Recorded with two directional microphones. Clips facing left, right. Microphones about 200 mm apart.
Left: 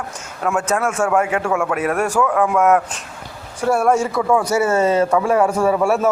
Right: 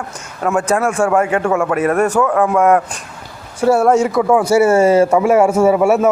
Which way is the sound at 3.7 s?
20° right (ahead or behind).